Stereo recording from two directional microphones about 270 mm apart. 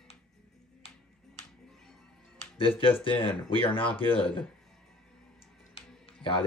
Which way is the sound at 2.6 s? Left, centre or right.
Centre.